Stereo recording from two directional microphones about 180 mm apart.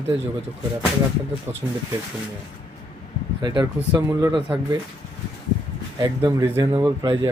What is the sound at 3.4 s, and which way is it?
Speech, 25° right (ahead or behind).